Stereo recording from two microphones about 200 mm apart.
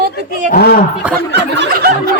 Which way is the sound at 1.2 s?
60° right (ahead or behind).